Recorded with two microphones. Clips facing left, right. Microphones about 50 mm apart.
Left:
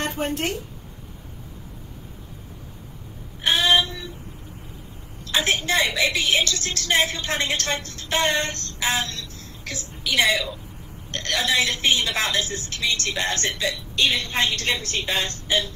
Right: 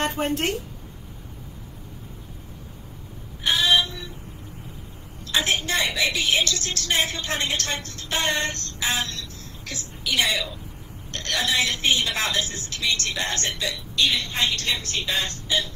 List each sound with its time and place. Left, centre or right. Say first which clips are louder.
0.0 s a woman's voice: right 1 dB; right
3.4 s female singing: left 1 dB; left
5.3 s a woman's voice: left 2 dB; left